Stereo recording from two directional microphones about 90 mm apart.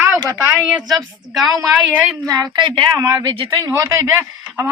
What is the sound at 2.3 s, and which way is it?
Speech, 50° right (ahead or behind).